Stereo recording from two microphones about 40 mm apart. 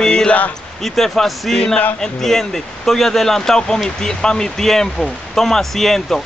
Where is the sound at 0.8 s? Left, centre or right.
Centre.